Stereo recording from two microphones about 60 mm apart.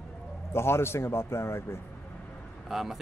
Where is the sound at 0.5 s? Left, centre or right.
Left.